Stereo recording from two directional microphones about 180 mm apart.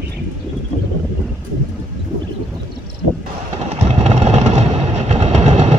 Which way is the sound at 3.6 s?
40° right (ahead or behind).